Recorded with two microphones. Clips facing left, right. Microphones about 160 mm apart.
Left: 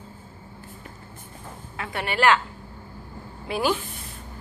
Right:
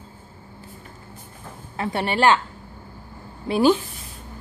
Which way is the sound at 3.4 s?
30° right (ahead or behind).